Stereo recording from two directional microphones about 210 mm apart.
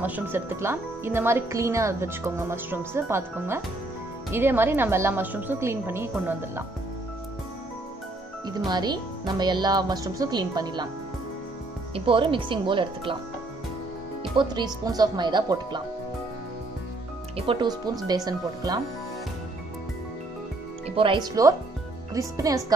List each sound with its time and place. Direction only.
0.0 s speech: 10° right (ahead or behind)
8.5 s speech: 20° right (ahead or behind)
11.9 s speech: 25° right (ahead or behind)
14.3 s speech: 20° right (ahead or behind)
17.4 s speech: 25° right (ahead or behind)
20.9 s speech: 25° right (ahead or behind)